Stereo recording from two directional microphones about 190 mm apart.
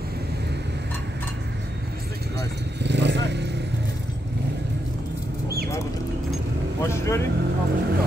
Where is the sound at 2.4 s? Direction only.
65° right (ahead or behind).